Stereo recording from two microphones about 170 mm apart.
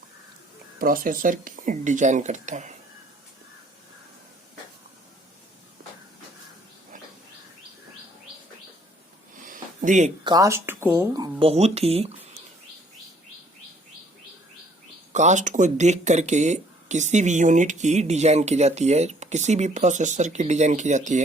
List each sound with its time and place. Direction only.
0.8 s speech: 55° right (ahead or behind)
9.4 s a sound: 50° right (ahead or behind)
10.2 s speech: 20° right (ahead or behind); by 12.4 s 35° right (ahead or behind)
15.1 s speech: 45° right (ahead or behind)